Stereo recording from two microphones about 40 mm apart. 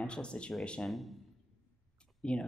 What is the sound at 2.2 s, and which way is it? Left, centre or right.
Speech, left.